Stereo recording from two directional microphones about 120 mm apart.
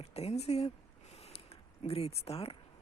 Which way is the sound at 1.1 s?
60° left (ahead or behind).